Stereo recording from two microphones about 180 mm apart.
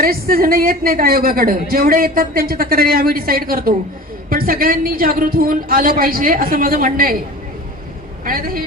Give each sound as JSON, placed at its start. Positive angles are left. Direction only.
{"t": 0.0, "sound": "a woman's voice", "side_deg": -55}
{"t": 8.2, "sound": "a man's voice", "side_deg": -50}